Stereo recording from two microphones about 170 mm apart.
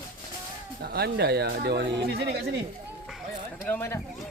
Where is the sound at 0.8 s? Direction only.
70° right (ahead or behind).